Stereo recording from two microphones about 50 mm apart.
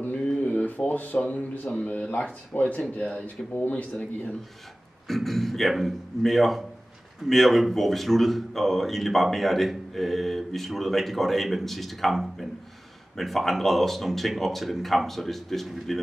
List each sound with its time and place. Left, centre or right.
0.4 s a sound: left
1.1 s speech: left
5.0 s speech: centre